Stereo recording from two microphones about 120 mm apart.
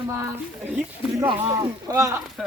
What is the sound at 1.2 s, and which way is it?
Speech, 30° right (ahead or behind).